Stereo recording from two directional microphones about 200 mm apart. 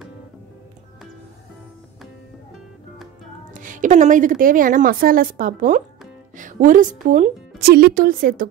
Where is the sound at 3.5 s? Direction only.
40° right (ahead or behind).